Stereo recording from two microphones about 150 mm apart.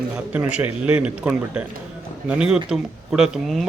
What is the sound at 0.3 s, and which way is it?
Speech, 10° right (ahead or behind).